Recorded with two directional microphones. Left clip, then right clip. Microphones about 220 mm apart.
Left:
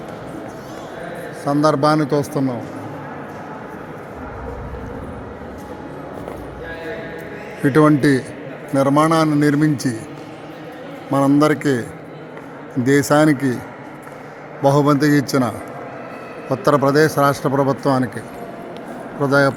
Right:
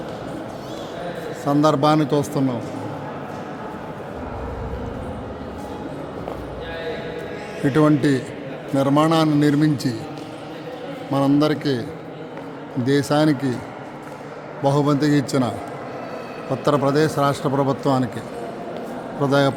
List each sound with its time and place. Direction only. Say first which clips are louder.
1.5 s speech: left 2 dB; 5° left (ahead or behind)
7.6 s a man's voice: left 4 dB; 15° left (ahead or behind)
11.1 s a man's voice: left 4 dB; 15° left (ahead or behind)
14.6 s a man's voice: left 4 dB; 20° left (ahead or behind)
19.2 s speech: left 3 dB; 5° left (ahead or behind)